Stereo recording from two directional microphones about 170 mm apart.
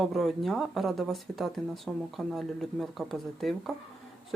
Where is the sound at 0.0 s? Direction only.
Centre (ahead or behind).